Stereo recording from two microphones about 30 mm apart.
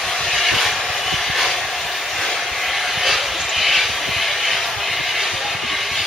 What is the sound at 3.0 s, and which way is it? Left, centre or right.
Vehicle, centre.